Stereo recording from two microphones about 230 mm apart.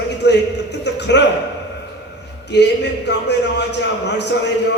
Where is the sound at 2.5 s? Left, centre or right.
Left.